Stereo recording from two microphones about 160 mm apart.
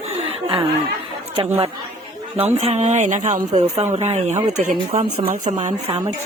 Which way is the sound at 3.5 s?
40° right (ahead or behind).